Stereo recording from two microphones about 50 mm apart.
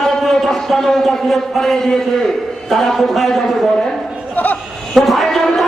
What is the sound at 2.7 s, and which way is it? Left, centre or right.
Speech, centre.